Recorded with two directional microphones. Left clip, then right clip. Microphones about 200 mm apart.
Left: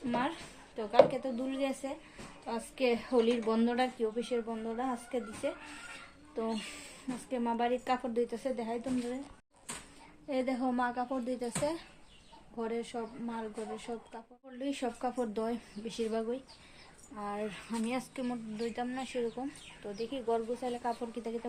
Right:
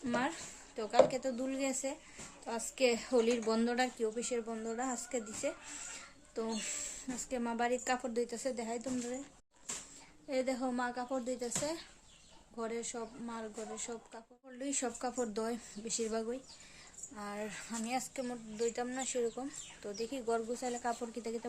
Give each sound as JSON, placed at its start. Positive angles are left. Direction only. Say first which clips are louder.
{"t": 1.0, "sound": "speech", "louder": "left 1 dB", "side_deg": -5}
{"t": 10.2, "sound": "speech", "louder": "left 2 dB", "side_deg": 0}